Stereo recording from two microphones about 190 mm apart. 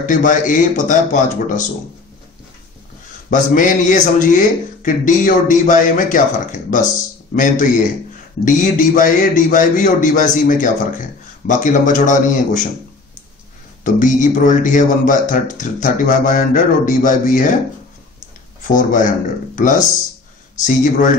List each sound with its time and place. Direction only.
0.0 s speech: 45° left (ahead or behind)
3.3 s speech: 45° left (ahead or behind)
8.5 s speech: 40° left (ahead or behind)
13.8 s speech: 40° left (ahead or behind)
18.6 s speech: 45° left (ahead or behind)